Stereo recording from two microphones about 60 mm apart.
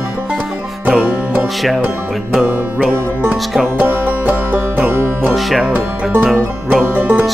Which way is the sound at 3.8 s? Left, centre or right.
Right.